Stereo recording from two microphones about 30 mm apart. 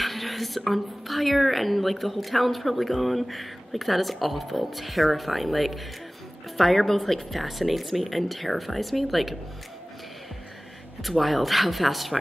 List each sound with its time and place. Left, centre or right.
0.0 s speech: centre
11.0 s speech: centre